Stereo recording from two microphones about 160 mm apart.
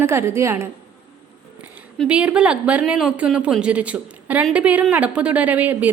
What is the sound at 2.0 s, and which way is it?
A woman's voice, 5° right (ahead or behind).